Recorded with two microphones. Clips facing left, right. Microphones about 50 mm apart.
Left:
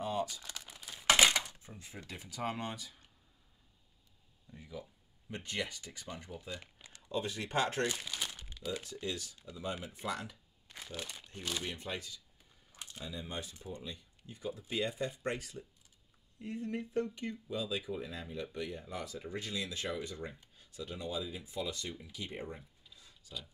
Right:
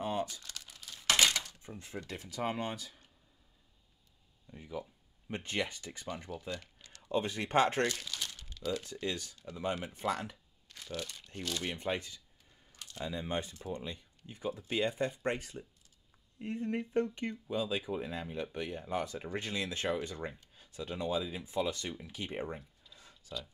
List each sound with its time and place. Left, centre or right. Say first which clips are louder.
0.0 s crumpling: right 1 dB; right
0.4 s crumpling: left 1 dB; centre
1.9 s speech: right 4 dB; right
4.5 s speech: right 5 dB; right
6.5 s a sound: right 3 dB; centre
7.0 s speech: right 4 dB; right
7.9 s crumpling: left 1 dB; centre
9.0 s speech: right 2 dB; right
9.4 s speech: right 5 dB; right
10.7 s speech: right 3 dB; centre
11.6 s speech: right 5 dB; right
22.8 s a sound: right 2 dB; centre